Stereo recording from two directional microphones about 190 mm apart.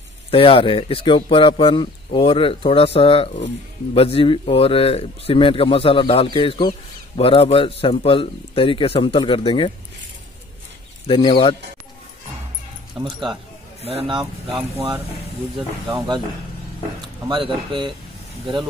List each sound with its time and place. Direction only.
0.3 s speech: 30° left (ahead or behind)
11.1 s speech: 25° left (ahead or behind)
13.0 s speech: 25° right (ahead or behind)
17.3 s speech: 25° right (ahead or behind)